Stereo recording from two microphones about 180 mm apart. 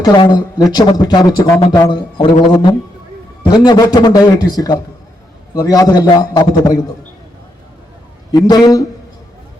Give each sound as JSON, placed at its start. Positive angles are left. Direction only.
{"t": 0.0, "sound": "speech", "side_deg": 25}
{"t": 3.4, "sound": "speech", "side_deg": 25}
{"t": 8.3, "sound": "speech", "side_deg": 20}